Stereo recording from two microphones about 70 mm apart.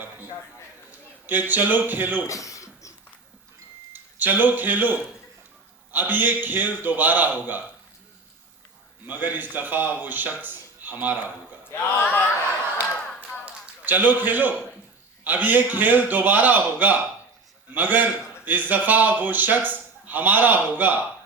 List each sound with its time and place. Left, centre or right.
0.9 s a man's voice: right
2.2 s a sound: left
3.9 s speech: right
9.0 s speech: right
11.7 s speech: left
13.2 s a sound: right
15.2 s speech: right